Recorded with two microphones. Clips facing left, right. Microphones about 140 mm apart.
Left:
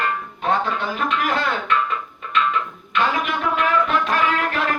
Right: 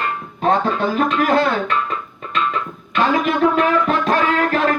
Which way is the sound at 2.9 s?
40° right (ahead or behind).